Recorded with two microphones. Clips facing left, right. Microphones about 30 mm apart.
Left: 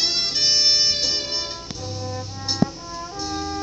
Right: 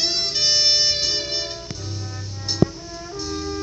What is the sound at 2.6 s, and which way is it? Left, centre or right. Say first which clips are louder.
Music: right 3 dB; centre.